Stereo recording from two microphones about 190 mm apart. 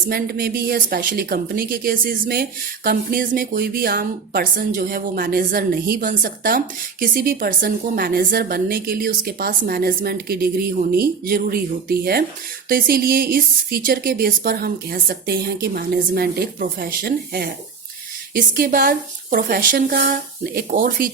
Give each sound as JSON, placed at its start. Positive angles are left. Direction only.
{"t": 0.1, "sound": "a woman's voice", "side_deg": -55}